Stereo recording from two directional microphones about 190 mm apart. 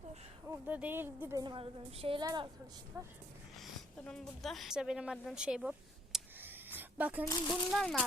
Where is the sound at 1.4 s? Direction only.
25° right (ahead or behind).